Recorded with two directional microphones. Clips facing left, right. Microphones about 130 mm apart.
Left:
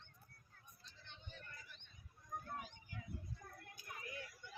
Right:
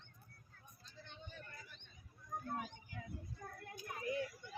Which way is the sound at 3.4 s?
90° right.